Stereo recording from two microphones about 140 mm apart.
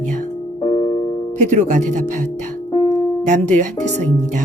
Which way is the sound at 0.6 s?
40° left (ahead or behind).